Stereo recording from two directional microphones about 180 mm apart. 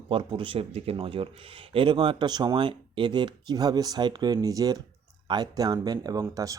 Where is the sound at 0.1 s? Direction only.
25° right (ahead or behind).